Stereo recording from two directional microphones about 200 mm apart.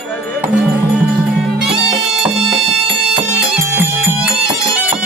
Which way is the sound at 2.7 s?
60° right (ahead or behind).